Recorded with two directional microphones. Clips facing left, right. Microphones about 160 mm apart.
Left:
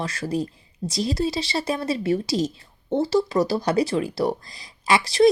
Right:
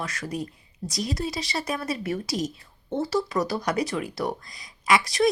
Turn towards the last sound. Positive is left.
turn(degrees=30)  # may be behind; listen again after turning